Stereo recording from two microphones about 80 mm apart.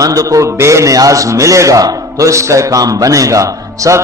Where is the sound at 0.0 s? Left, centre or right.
Right.